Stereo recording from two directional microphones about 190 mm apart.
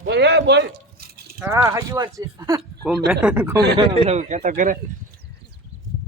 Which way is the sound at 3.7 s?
35° right (ahead or behind).